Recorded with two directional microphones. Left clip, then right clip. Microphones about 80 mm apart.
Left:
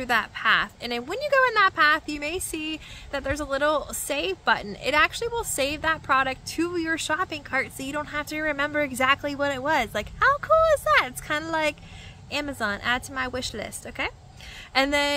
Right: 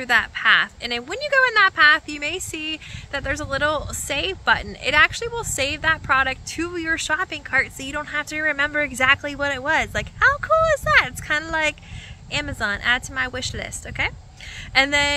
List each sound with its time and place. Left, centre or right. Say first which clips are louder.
0.0 s a woman's voice: right 5 dB; left